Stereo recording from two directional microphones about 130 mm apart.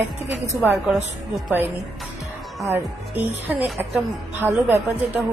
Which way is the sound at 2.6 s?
15° right (ahead or behind).